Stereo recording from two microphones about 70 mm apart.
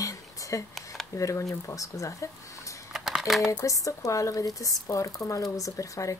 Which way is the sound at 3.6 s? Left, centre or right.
Left.